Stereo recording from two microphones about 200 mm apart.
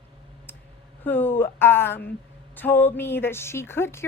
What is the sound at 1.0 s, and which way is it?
Speech, 10° left (ahead or behind).